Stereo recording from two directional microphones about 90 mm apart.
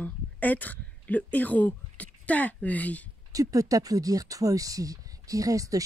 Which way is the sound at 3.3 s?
40° right (ahead or behind).